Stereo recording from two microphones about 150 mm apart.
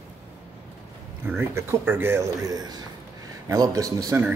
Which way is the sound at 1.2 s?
15° right (ahead or behind).